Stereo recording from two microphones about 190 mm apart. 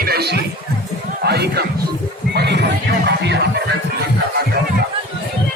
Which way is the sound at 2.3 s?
60° right (ahead or behind).